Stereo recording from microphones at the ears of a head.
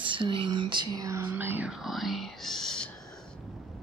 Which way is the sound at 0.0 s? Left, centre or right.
Right.